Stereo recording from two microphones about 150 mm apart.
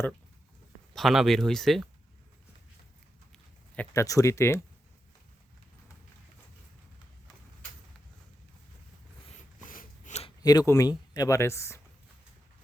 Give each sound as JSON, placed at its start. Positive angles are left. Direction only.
{"t": 0.9, "sound": "speech", "side_deg": 0}
{"t": 3.9, "sound": "speech", "side_deg": 20}
{"t": 9.6, "sound": "a sound", "side_deg": 60}
{"t": 10.2, "sound": "speech", "side_deg": 25}